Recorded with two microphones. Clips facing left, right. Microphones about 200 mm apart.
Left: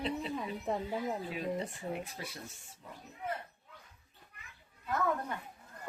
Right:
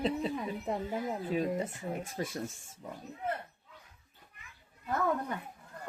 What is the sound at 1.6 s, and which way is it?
Speech, 45° right (ahead or behind).